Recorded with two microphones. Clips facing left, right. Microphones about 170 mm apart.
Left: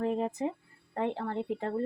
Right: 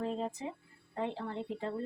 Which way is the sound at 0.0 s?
55° left (ahead or behind).